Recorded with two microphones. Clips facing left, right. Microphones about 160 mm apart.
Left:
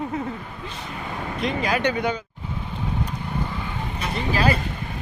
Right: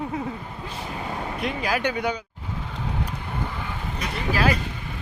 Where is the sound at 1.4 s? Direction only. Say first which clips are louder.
Left 3 dB; 5° right (ahead or behind).